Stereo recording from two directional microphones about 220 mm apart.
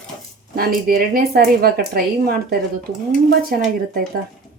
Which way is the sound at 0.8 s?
40° right (ahead or behind).